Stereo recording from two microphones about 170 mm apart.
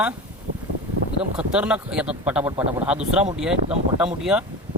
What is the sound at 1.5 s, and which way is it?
Speech, 5° right (ahead or behind).